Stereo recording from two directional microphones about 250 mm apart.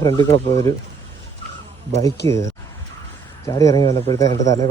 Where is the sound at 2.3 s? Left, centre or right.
Centre.